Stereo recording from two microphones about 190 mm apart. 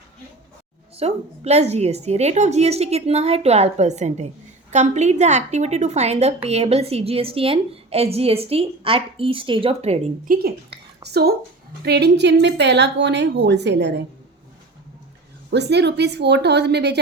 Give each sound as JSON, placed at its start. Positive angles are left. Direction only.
{"t": 0.9, "sound": "a woman's voice", "side_deg": -35}
{"t": 10.2, "sound": "a woman's voice", "side_deg": -55}
{"t": 15.4, "sound": "a woman's voice", "side_deg": -65}